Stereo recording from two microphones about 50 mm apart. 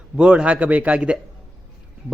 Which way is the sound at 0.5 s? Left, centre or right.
Right.